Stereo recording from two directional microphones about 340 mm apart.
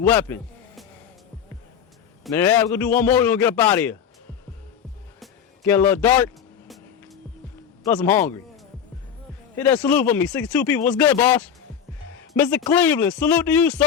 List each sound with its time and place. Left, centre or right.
0.0 s speech: centre
2.2 s speech: centre
5.2 s music: centre
7.9 s speech: centre
9.6 s speech: centre